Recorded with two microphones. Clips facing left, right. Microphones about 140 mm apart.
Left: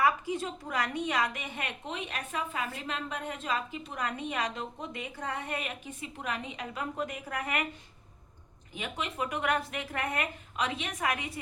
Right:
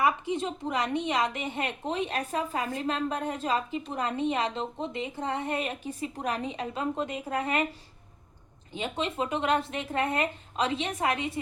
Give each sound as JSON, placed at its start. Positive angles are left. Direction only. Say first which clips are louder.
{"t": 0.0, "sound": "a woman's voice", "louder": "right 2 dB", "side_deg": -20}
{"t": 8.7, "sound": "a woman's voice", "louder": "right 5 dB", "side_deg": -30}